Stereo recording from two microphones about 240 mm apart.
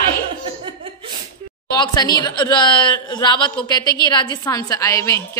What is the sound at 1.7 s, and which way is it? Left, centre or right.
A woman's voice, centre.